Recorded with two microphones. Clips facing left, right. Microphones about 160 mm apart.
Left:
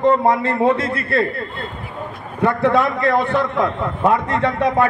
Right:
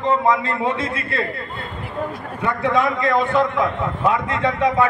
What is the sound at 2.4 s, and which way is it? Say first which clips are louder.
A man's voice: left 4 dB; 60° left (ahead or behind).